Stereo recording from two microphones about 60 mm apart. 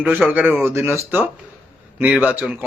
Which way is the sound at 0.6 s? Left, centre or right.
Right.